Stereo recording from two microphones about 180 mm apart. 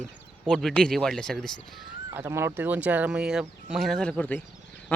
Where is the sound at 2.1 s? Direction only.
15° right (ahead or behind).